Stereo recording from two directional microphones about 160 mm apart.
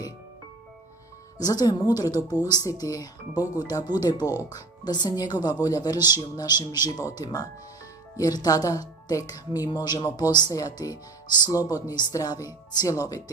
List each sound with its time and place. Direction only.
1.4 s speech: 25° left (ahead or behind)